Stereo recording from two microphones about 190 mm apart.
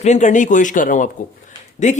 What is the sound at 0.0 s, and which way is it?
Speech, 40° left (ahead or behind).